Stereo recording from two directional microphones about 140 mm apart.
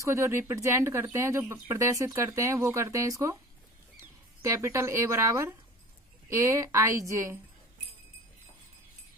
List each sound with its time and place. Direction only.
0.0 s speech: 20° right (ahead or behind)